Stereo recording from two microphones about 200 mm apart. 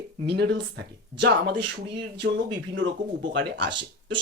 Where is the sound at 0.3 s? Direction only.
55° right (ahead or behind).